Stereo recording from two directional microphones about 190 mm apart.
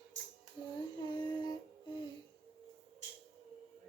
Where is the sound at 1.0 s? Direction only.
20° left (ahead or behind).